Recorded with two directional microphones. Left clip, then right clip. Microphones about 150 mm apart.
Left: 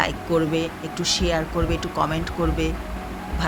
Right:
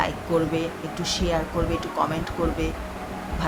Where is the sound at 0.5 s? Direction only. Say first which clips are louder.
Left 2 dB; 15° left (ahead or behind).